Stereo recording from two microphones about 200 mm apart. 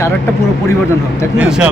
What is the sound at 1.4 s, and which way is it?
Speech, 5° right (ahead or behind).